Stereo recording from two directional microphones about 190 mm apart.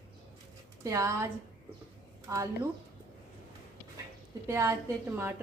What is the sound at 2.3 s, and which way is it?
Speech, 15° right (ahead or behind).